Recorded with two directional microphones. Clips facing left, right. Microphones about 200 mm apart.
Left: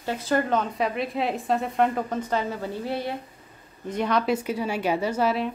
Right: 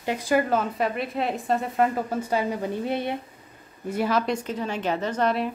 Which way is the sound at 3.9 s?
5° right (ahead or behind).